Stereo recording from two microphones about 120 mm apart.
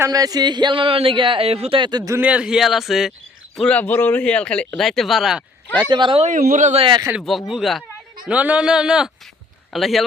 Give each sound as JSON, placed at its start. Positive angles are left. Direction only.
{"t": 0.0, "sound": "a man's voice", "side_deg": -30}
{"t": 1.8, "sound": "speech", "side_deg": -35}
{"t": 2.1, "sound": "a man's voice", "side_deg": -10}
{"t": 3.6, "sound": "speech", "side_deg": 10}
{"t": 5.8, "sound": "speech", "side_deg": -40}
{"t": 6.2, "sound": "speech", "side_deg": -90}
{"t": 7.2, "sound": "a man's voice", "side_deg": 0}